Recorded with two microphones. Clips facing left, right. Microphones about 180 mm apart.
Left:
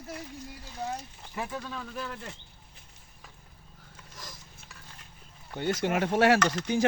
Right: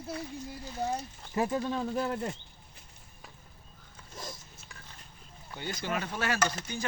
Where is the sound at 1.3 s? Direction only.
35° right (ahead or behind).